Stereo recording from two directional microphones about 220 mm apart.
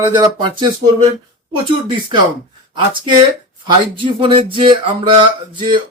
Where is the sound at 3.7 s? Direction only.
25° right (ahead or behind).